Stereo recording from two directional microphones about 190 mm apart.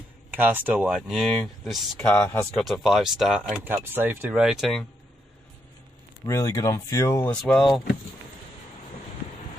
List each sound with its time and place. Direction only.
0.3 s speech: 10° right (ahead or behind)
6.2 s speech: 15° left (ahead or behind)
7.4 s speech: centre (ahead or behind)